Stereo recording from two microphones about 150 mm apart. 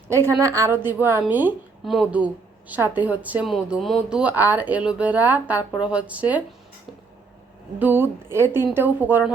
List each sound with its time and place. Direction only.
0.3 s speech: 20° right (ahead or behind)
1.8 s speech: centre (ahead or behind)
7.8 s speech: 15° right (ahead or behind)